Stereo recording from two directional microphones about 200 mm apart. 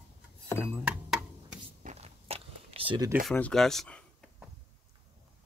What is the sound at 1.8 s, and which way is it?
Biting, 35° right (ahead or behind).